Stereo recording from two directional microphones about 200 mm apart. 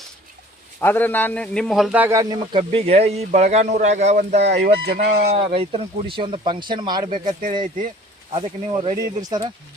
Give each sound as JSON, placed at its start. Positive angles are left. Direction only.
{"t": 0.8, "sound": "a man's voice", "side_deg": 10}
{"t": 4.4, "sound": "speech", "side_deg": -55}
{"t": 5.3, "sound": "a man's voice", "side_deg": -30}
{"t": 8.3, "sound": "a man's voice", "side_deg": -25}